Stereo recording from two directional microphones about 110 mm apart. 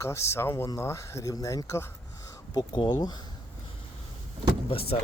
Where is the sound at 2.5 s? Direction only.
40° left (ahead or behind).